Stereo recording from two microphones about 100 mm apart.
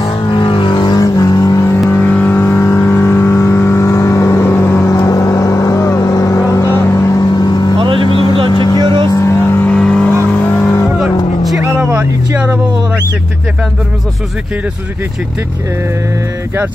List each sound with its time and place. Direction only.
0.4 s vehicle: 55° left (ahead or behind); by 1.8 s 30° left (ahead or behind)
1.9 s vehicle: 15° left (ahead or behind); by 7.7 s 45° left (ahead or behind)
8.1 s vehicle: 60° left (ahead or behind)
8.5 s vehicle: 45° left (ahead or behind)
9.0 s vehicle: 30° left (ahead or behind)
9.8 s vehicle: 10° left (ahead or behind)